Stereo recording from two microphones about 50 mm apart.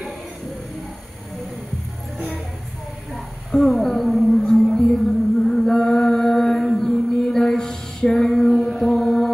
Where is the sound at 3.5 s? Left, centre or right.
Centre.